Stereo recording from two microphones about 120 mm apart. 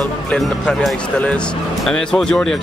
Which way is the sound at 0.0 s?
10° left (ahead or behind).